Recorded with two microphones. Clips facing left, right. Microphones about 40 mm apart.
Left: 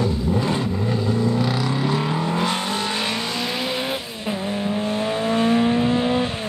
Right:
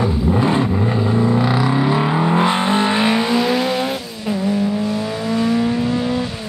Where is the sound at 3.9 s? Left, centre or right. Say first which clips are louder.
Right 4 dB; left.